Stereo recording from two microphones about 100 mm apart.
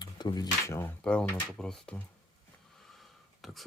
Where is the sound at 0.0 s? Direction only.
45° left (ahead or behind).